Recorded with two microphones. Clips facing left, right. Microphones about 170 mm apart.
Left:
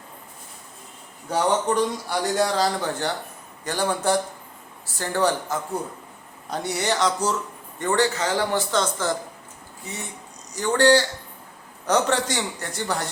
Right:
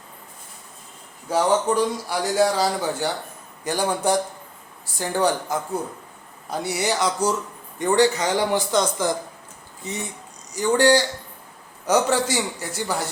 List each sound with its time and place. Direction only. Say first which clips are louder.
1.3 s a man's voice: right 2 dB; 5° right (ahead or behind); by 10.0 s 20° right (ahead or behind)
10.5 s a man's voice: right 1 dB; 10° right (ahead or behind)